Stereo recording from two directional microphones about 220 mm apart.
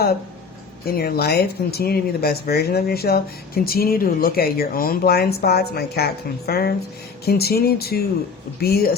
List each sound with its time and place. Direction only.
0.9 s speech: 45° left (ahead or behind)